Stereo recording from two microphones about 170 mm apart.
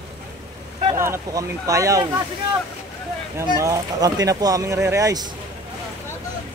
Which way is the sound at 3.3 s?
20° right (ahead or behind).